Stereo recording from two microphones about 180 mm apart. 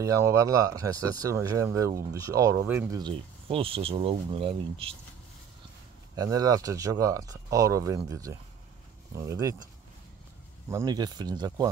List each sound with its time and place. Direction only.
0.0 s speech: 15° right (ahead or behind)
3.0 s speech: 30° right (ahead or behind)
6.1 s speech: 20° right (ahead or behind)
10.7 s speech: 20° right (ahead or behind)